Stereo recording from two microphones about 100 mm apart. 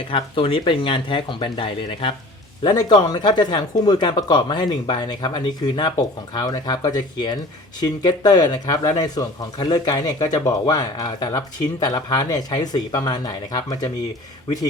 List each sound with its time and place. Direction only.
0.1 s speech: 65° left (ahead or behind)
2.6 s speech: 45° left (ahead or behind)